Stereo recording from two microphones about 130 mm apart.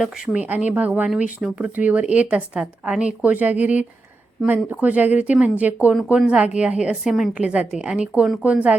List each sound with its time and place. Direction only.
0.0 s speech: centre (ahead or behind)
0.4 s a woman's voice: 10° right (ahead or behind)